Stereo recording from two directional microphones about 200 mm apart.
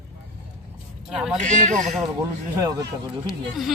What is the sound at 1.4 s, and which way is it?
Speech, 40° right (ahead or behind).